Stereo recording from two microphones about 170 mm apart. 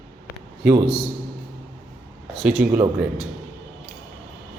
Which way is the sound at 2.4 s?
Centre (ahead or behind).